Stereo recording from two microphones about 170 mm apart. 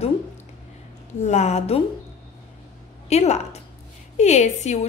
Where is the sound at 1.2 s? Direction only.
40° left (ahead or behind).